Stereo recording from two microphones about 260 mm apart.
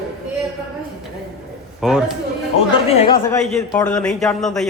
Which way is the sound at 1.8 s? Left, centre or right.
Centre.